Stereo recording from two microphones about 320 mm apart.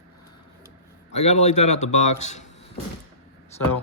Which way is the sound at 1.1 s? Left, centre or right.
Left.